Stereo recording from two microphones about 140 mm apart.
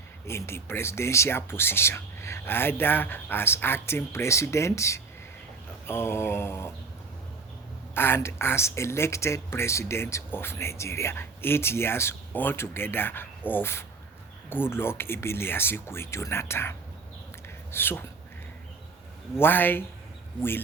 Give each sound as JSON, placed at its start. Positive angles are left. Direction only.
{"t": 0.3, "sound": "speech", "side_deg": 20}
{"t": 7.9, "sound": "speech", "side_deg": 15}
{"t": 19.4, "sound": "speech", "side_deg": 15}